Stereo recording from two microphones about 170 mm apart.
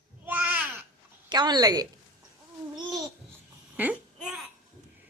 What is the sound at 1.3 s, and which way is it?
Speech, 25° right (ahead or behind).